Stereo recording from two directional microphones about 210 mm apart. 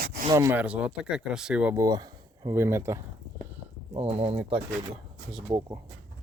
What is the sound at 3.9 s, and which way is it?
Speech, 30° right (ahead or behind).